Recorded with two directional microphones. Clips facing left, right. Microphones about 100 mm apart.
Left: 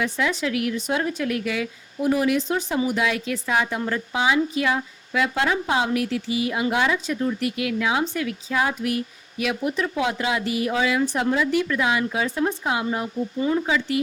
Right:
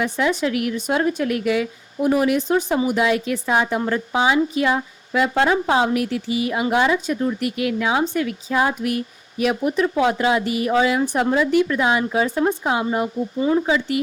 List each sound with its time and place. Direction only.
0.0 s a woman's voice: 50° right (ahead or behind)
11.3 s a woman's voice: 40° right (ahead or behind)